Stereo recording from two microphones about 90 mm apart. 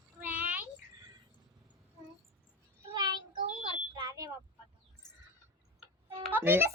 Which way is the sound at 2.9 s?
50° right (ahead or behind).